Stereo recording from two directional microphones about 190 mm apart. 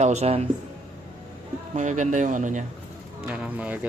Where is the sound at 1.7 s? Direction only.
40° right (ahead or behind).